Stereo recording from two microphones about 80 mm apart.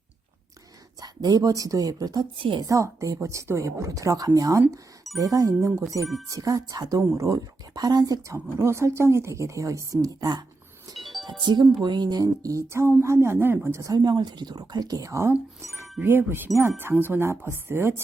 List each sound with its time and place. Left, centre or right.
0.9 s speech: right
2.6 s a woman's voice: right
8.5 s a woman's voice: right
10.9 s music: centre
11.3 s a woman's voice: right
13.9 s a woman's voice: right
15.6 s music: right
16.0 s a woman's voice: right